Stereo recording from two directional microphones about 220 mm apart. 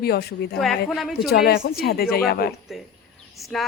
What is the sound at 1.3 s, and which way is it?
A woman's voice, 45° left (ahead or behind).